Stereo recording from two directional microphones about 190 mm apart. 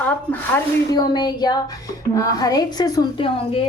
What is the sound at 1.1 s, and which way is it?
Speech, 20° left (ahead or behind).